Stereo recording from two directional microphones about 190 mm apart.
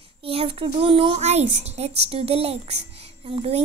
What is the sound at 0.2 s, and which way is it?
A woman's voice, 30° right (ahead or behind).